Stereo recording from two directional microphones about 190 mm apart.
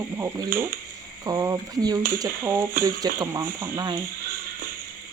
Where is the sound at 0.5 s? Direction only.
50° right (ahead or behind).